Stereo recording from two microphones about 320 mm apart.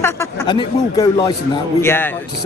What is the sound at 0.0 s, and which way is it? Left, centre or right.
A man's voice, centre.